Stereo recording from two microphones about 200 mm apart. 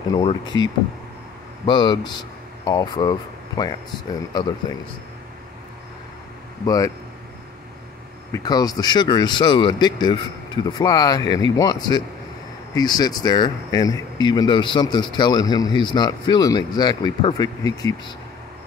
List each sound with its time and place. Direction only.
0.1 s speech: 25° left (ahead or behind)
1.7 s speech: 20° left (ahead or behind)
6.6 s speech: 20° left (ahead or behind)
8.3 s speech: 20° left (ahead or behind)